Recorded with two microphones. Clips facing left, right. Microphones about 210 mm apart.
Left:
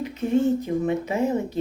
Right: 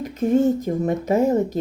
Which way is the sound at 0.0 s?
40° right (ahead or behind).